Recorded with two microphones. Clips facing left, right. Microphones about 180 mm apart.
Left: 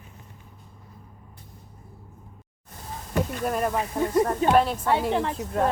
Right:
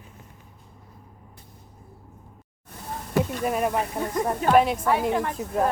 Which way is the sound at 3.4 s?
5° right (ahead or behind).